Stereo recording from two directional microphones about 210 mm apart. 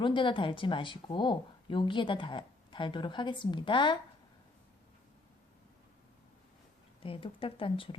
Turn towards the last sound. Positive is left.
turn(degrees=25)  # may be behind; listen again after turning